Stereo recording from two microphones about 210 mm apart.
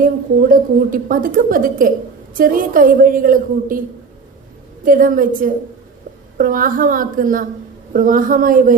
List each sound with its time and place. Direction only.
0.0 s a woman's voice: 40° right (ahead or behind)
4.9 s a woman's voice: 40° right (ahead or behind)